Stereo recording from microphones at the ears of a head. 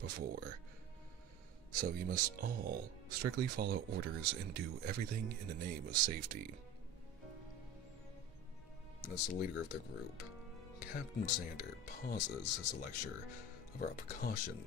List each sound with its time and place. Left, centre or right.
0.0 s speech: right
1.7 s speech: right
9.0 s speech: left